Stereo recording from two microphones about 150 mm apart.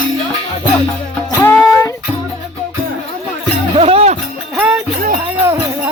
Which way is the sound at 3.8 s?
40° right (ahead or behind).